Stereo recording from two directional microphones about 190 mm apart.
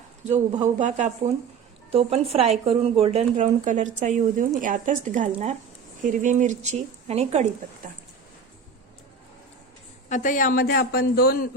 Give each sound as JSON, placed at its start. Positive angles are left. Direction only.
{"t": 0.6, "sound": "speech", "side_deg": -40}
{"t": 10.1, "sound": "speech", "side_deg": 45}